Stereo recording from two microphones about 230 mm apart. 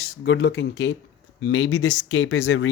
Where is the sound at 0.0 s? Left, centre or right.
Left.